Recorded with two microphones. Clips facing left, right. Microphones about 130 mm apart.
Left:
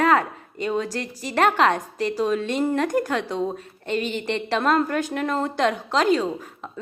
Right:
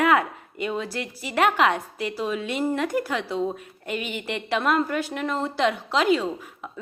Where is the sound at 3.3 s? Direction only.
5° left (ahead or behind).